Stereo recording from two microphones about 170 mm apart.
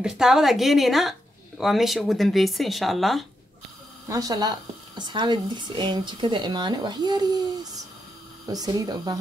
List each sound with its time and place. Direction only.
0.0 s speech: 5° right (ahead or behind)
4.1 s a woman's voice: 20° right (ahead or behind)